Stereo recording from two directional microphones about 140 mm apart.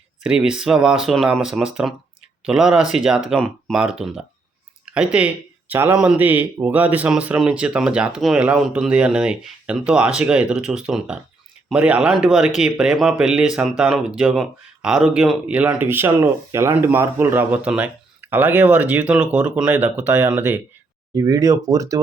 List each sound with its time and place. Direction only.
0.2 s speech: 5° right (ahead or behind)
21.2 s speech: 25° right (ahead or behind)